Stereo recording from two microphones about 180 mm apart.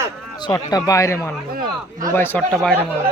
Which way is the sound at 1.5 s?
50° right (ahead or behind).